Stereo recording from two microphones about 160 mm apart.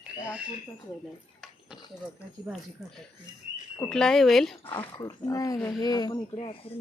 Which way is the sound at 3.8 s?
5° left (ahead or behind).